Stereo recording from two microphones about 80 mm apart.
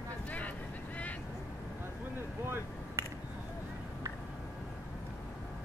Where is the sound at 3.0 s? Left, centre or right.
Right.